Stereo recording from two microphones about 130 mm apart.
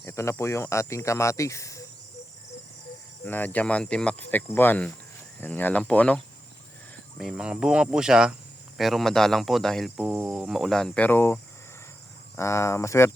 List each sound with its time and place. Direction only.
0.0 s speech: 20° left (ahead or behind)
3.2 s speech: 15° left (ahead or behind)
7.2 s speech: 5° right (ahead or behind)
10.0 s speech: 10° right (ahead or behind); by 11.3 s 15° left (ahead or behind)
12.4 s speech: 20° left (ahead or behind)